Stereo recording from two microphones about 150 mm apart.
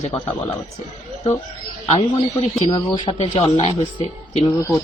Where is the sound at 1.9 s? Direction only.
35° left (ahead or behind).